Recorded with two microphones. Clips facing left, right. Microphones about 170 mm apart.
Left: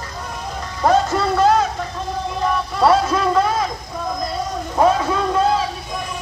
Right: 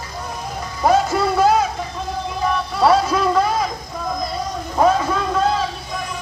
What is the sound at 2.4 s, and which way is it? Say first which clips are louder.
Vehicle: even; 5° right (ahead or behind).